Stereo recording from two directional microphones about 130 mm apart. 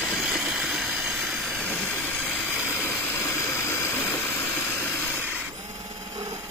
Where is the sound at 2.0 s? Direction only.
5° left (ahead or behind).